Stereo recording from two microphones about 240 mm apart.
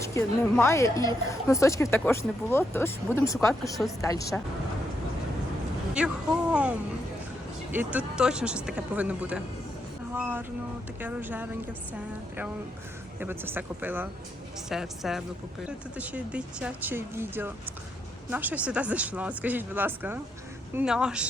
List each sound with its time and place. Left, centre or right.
0.1 s a woman's voice: centre
6.0 s speech: centre
13.1 s speech: centre